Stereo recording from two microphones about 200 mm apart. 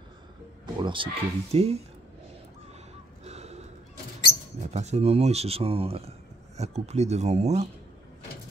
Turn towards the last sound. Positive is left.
turn(degrees=-35)  # may be behind; listen again after turning